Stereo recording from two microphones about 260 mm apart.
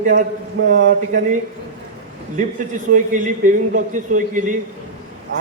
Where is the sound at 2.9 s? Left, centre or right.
Right.